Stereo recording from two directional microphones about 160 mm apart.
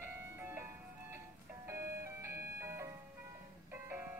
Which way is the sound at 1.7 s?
15° right (ahead or behind).